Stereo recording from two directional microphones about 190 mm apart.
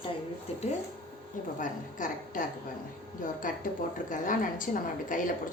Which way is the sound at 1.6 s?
45° left (ahead or behind).